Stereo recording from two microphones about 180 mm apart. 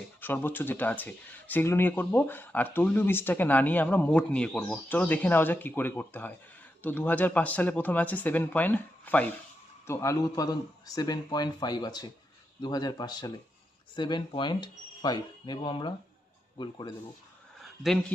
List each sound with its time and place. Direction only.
0.2 s speech: 10° left (ahead or behind)